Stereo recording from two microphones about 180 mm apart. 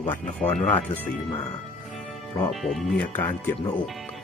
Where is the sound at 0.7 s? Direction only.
10° left (ahead or behind).